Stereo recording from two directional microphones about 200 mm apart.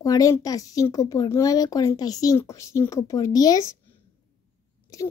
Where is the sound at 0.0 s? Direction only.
15° left (ahead or behind).